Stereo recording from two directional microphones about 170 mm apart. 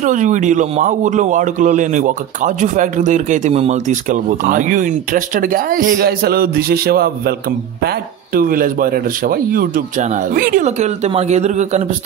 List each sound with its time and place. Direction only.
0.0 s a man's voice: 50° right (ahead or behind)